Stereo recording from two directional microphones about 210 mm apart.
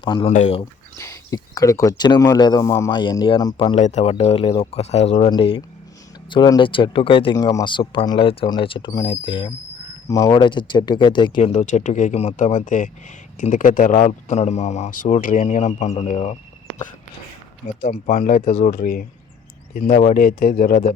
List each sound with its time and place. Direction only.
0.0 s speech: 25° left (ahead or behind)
0.6 s speech: 15° left (ahead or behind)
3.8 s speech: 35° left (ahead or behind)